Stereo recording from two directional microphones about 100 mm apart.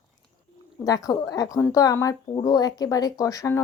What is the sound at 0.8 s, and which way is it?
A woman's voice, 35° left (ahead or behind).